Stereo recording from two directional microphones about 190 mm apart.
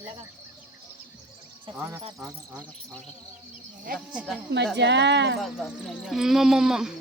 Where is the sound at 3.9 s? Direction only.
45° right (ahead or behind).